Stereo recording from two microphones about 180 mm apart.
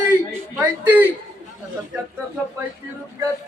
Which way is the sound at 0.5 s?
10° right (ahead or behind).